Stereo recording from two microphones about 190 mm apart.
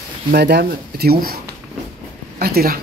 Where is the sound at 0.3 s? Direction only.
60° right (ahead or behind).